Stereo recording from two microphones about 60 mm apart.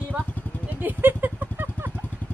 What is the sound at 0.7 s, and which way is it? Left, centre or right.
Vehicle, right.